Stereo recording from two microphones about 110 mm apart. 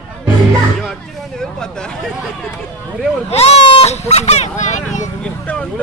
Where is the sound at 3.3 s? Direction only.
70° left (ahead or behind); by 5.1 s 90° left.